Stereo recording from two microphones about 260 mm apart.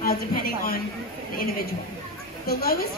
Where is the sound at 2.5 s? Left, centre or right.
Left.